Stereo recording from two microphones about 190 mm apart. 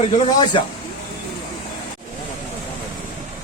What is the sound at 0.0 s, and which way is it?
Speech, 25° left (ahead or behind).